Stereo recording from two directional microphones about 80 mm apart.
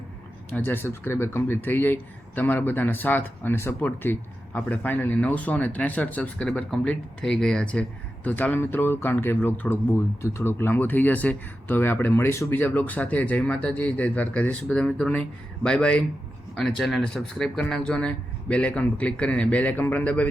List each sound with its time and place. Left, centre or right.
0.5 s speech: left
12.5 s speech: left